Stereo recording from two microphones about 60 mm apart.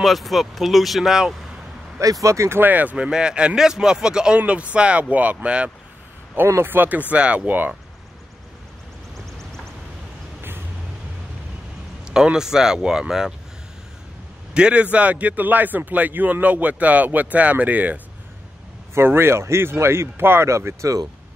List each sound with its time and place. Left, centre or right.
0.0 s speech: centre
2.2 s speech: right
2.6 s a man's voice: right
3.1 s a man's voice: centre
6.3 s speech: right
12.0 s speech: centre
14.5 s a man's voice: centre
18.9 s speech: right
20.4 s speech: right